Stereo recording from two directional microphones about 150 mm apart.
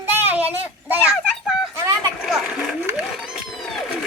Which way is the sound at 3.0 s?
5° right (ahead or behind).